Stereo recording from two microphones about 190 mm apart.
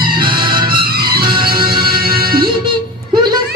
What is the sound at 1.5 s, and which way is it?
Music, 25° right (ahead or behind).